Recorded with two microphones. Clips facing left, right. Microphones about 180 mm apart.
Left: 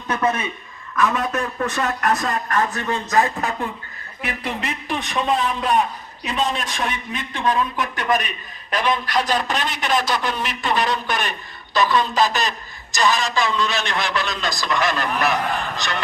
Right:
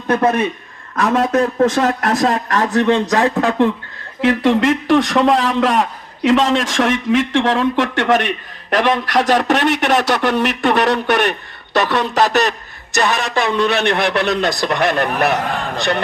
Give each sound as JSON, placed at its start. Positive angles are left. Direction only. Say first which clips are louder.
{"t": 0.9, "sound": "a man's voice", "louder": "right 6 dB", "side_deg": -85}